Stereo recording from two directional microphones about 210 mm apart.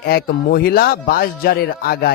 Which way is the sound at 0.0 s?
45° left (ahead or behind).